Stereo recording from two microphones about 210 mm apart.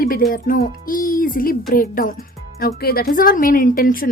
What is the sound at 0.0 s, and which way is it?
A woman's voice, 45° left (ahead or behind).